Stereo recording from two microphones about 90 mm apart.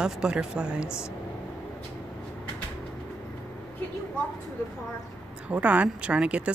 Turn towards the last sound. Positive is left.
turn(degrees=-15)  # may be behind; listen again after turning